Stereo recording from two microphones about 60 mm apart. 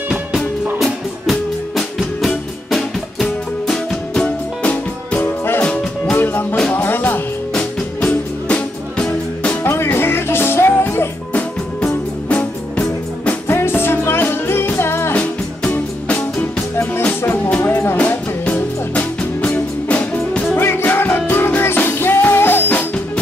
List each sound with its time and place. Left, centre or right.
0.7 s music: centre
5.1 s music: left
8.0 s music: left
9.6 s music: left
11.8 s music: left
13.5 s music: left
17.6 s music: left
17.9 s music: left
20.5 s music: left